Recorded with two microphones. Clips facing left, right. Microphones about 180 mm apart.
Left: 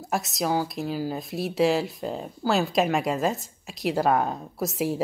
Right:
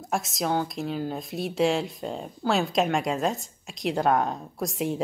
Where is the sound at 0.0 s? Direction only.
Centre (ahead or behind).